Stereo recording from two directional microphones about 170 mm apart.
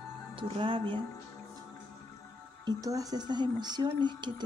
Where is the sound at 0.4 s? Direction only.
30° right (ahead or behind).